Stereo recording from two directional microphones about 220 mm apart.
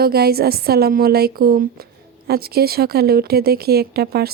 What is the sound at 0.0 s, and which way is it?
A woman's voice, 45° right (ahead or behind).